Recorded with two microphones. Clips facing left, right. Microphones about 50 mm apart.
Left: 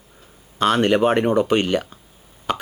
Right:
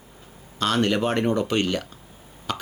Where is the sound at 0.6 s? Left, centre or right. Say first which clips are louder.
Left 5 dB; left.